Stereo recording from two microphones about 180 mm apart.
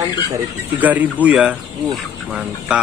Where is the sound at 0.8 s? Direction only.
10° right (ahead or behind).